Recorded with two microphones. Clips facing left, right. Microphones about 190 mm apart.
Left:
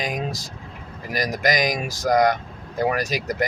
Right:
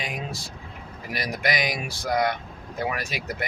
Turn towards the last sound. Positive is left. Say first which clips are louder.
# left 7 dB
turn(degrees=40)  # may be behind; listen again after turning